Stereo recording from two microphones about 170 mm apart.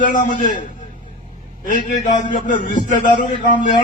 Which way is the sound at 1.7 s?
50° left (ahead or behind).